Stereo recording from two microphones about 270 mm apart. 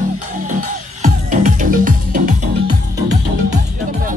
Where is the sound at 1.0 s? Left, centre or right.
Right.